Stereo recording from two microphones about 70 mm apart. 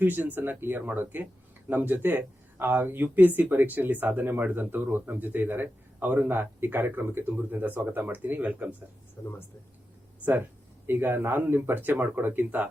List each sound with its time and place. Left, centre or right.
0.0 s speech: right
9.2 s speech: left
10.8 s speech: right